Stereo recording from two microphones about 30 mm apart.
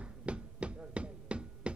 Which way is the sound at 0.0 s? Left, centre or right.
Right.